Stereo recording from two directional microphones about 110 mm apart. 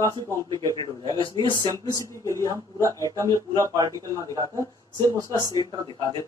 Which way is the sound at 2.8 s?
30° right (ahead or behind).